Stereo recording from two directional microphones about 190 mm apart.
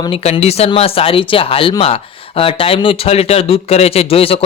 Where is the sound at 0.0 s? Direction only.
30° left (ahead or behind).